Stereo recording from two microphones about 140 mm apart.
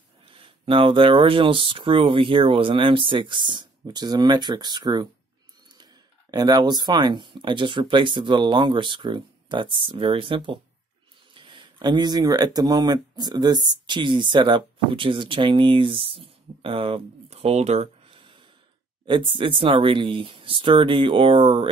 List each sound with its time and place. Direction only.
0.2 s speech: 40° right (ahead or behind)
6.3 s speech: 30° right (ahead or behind)